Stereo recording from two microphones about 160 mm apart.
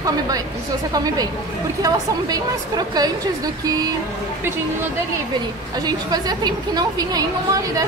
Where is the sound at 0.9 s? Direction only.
25° right (ahead or behind).